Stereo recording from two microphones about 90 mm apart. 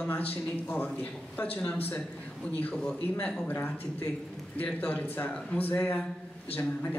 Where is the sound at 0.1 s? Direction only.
20° left (ahead or behind).